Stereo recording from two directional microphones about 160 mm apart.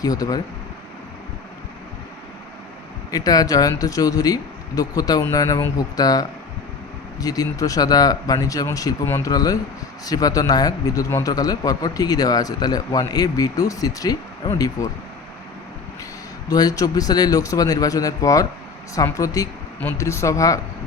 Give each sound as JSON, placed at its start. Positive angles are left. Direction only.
{"t": 0.0, "sound": "speech", "side_deg": 20}
{"t": 3.1, "sound": "speech", "side_deg": 25}
{"t": 16.5, "sound": "speech", "side_deg": 25}